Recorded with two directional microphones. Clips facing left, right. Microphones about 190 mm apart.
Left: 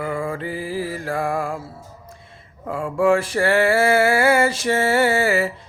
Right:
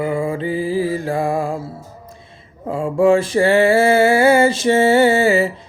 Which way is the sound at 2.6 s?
25° right (ahead or behind).